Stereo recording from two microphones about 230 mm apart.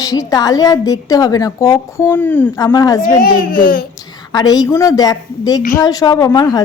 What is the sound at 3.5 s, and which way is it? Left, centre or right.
Speech, left.